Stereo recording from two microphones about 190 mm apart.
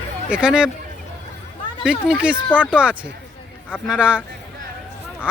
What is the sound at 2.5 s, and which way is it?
Speech, 10° left (ahead or behind).